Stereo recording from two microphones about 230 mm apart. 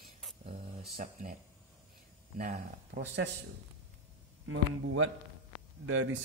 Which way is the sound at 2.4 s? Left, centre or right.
Right.